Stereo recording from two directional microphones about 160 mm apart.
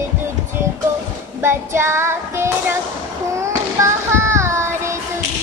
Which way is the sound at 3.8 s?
15° right (ahead or behind).